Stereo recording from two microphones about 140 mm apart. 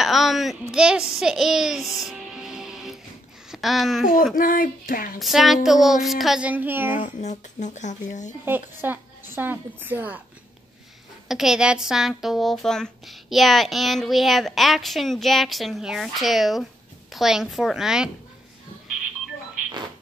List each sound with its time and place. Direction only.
0.0 s a woman's voice: centre (ahead or behind)
4.4 s speech: 85° left
5.2 s a woman's voice: centre (ahead or behind)
7.0 s speech: 60° left (ahead or behind)
8.5 s a woman's voice: 15° right (ahead or behind)
11.2 s a woman's voice: 5° right (ahead or behind)